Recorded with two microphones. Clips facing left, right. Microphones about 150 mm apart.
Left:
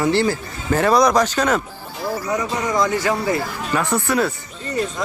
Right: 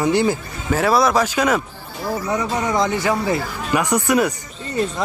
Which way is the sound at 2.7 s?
20° right (ahead or behind).